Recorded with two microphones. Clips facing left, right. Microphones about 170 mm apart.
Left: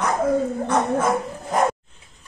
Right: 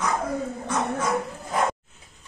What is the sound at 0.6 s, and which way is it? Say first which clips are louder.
Dog: left 3 dB; 55° left (ahead or behind).